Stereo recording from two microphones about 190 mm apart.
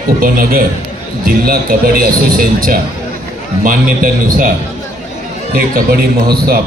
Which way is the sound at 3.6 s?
50° right (ahead or behind).